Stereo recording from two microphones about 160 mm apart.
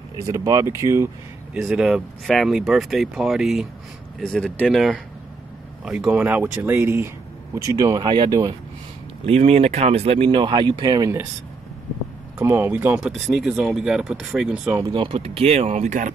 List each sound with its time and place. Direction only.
0.3 s speech: 20° right (ahead or behind)
1.5 s speech: 5° right (ahead or behind); by 8.5 s 25° right (ahead or behind)
9.2 s speech: 40° right (ahead or behind); by 11.1 s 25° right (ahead or behind)
12.4 s speech: 15° right (ahead or behind)
14.8 s speech: 30° right (ahead or behind); by 16.1 s 50° right (ahead or behind)